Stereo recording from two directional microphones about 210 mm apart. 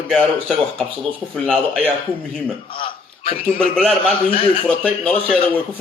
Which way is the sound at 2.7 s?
25° left (ahead or behind).